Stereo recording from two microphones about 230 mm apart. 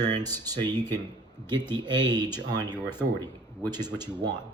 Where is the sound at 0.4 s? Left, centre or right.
Centre.